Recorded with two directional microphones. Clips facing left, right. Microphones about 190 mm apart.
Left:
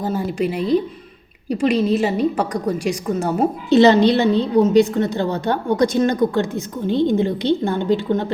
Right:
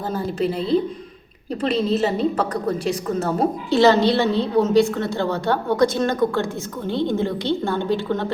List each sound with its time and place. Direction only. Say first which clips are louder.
0.0 s a woman's voice: left 2 dB; 10° left (ahead or behind)